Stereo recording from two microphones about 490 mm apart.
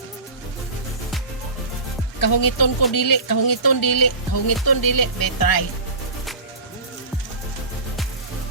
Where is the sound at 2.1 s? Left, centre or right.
Left.